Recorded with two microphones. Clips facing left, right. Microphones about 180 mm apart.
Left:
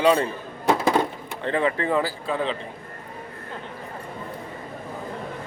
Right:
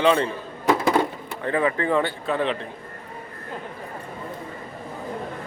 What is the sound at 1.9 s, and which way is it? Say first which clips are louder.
Speech: right 1 dB; centre (ahead or behind).